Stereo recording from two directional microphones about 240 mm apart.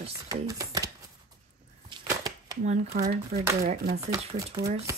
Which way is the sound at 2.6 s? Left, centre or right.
Right.